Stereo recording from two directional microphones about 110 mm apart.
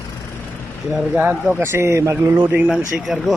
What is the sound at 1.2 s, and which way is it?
Speech, 15° right (ahead or behind).